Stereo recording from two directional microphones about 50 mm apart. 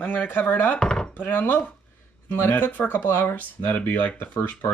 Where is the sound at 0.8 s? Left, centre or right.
Centre.